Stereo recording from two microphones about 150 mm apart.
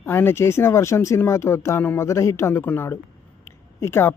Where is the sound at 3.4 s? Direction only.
15° left (ahead or behind).